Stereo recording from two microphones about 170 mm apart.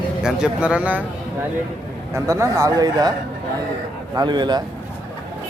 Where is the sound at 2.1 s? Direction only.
20° right (ahead or behind).